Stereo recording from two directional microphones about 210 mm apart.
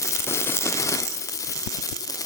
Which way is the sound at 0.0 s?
15° left (ahead or behind).